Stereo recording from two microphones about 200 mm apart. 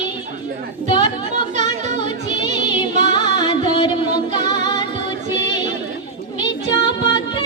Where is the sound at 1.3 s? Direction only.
35° right (ahead or behind).